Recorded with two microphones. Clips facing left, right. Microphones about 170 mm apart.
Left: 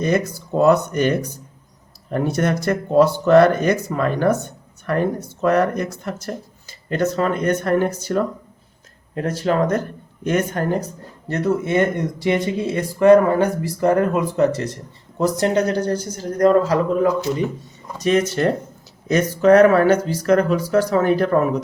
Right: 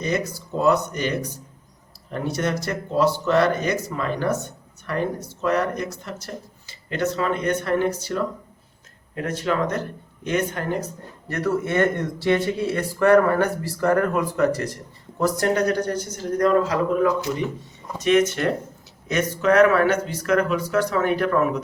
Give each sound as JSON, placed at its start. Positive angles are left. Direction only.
{"t": 0.0, "sound": "speech", "side_deg": 55}
{"t": 9.1, "sound": "speech", "side_deg": 35}
{"t": 11.3, "sound": "speech", "side_deg": 20}